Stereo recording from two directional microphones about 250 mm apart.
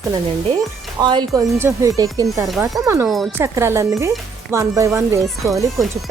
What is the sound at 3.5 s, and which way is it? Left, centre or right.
Speech, centre.